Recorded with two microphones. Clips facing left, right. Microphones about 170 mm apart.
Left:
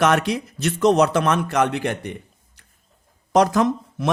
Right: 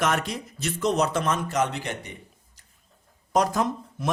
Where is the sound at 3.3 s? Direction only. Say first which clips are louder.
Left 6 dB; 85° left.